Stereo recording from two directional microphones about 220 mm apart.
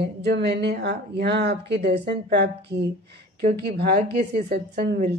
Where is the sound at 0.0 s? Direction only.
50° right (ahead or behind).